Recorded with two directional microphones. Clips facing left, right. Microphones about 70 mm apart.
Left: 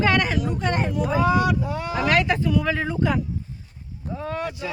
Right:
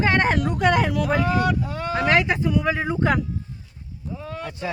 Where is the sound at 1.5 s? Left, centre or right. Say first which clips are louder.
Even; centre.